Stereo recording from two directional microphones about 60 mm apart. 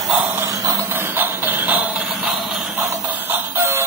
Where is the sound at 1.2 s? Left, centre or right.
Right.